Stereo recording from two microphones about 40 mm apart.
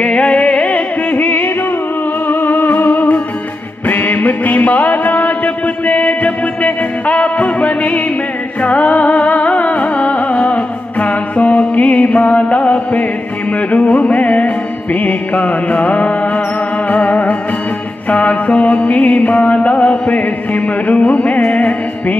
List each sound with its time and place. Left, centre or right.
0.0 s music: left